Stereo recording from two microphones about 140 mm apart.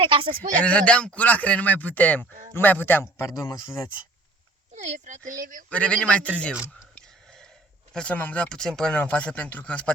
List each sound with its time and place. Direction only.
0.0 s speech: 35° right (ahead or behind)
0.6 s speech: 10° left (ahead or behind)
4.7 s speech: 55° right (ahead or behind)
5.7 s speech: 10° left (ahead or behind)
7.9 s speech: 10° left (ahead or behind)